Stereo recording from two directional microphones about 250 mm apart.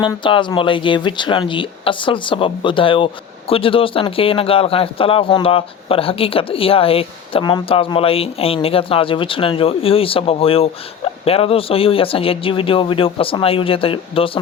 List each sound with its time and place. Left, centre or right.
0.0 s speech: centre